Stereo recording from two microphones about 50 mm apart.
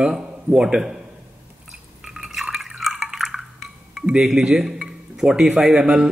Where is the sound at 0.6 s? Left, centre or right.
Centre.